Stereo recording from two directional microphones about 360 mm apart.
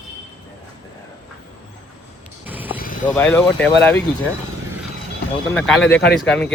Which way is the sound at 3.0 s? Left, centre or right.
Centre.